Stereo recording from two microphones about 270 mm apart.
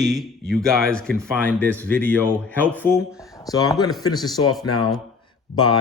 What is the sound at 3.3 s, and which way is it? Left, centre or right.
Speech, centre.